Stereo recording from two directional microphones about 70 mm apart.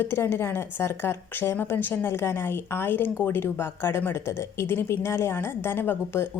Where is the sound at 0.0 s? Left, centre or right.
Left.